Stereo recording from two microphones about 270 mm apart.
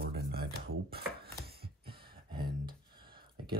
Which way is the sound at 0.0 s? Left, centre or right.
Right.